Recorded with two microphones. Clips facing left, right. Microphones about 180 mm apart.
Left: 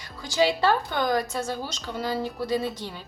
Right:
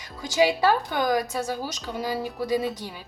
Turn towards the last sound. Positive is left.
turn(degrees=-10)  # may be behind; listen again after turning